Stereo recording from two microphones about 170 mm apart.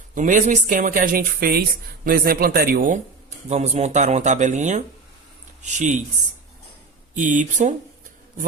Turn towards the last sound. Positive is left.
turn(degrees=-45)  # may be behind; listen again after turning